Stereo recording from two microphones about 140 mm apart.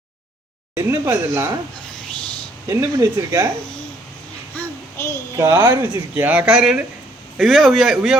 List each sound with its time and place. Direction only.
0.8 s speech: 20° right (ahead or behind)
2.6 s speech: 20° right (ahead or behind)
4.5 s a sound: 15° left (ahead or behind)
5.4 s a man's voice: 20° right (ahead or behind); by 8.1 s centre (ahead or behind)